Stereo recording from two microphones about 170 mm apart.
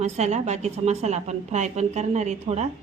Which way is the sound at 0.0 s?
40° right (ahead or behind).